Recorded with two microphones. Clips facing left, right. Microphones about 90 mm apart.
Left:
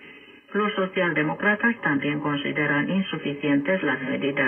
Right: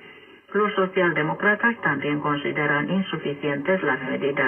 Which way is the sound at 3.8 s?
20° right (ahead or behind).